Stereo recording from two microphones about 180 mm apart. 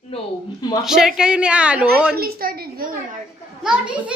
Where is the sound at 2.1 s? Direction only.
60° right (ahead or behind).